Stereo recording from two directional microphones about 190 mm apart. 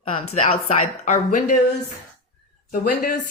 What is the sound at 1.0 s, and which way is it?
Speech, 45° left (ahead or behind).